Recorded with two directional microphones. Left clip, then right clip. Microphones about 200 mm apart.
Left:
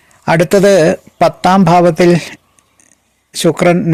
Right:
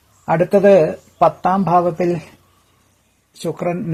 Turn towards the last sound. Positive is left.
turn(degrees=40)  # may be behind; listen again after turning